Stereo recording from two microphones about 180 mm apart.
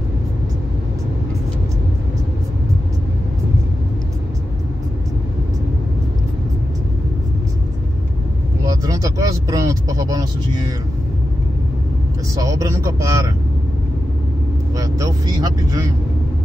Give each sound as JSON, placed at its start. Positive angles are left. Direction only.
{"t": 8.6, "sound": "vehicle", "side_deg": -20}
{"t": 12.4, "sound": "a man's voice", "side_deg": -20}
{"t": 14.8, "sound": "speech", "side_deg": -20}